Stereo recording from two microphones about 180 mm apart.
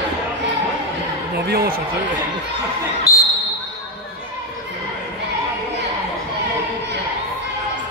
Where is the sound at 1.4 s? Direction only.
55° right (ahead or behind).